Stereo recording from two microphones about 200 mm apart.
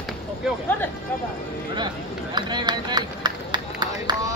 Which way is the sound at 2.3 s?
20° right (ahead or behind).